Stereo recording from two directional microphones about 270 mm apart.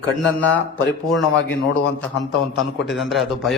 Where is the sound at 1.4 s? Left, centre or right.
Left.